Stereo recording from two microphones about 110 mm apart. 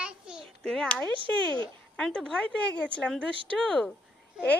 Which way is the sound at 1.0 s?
50° right (ahead or behind).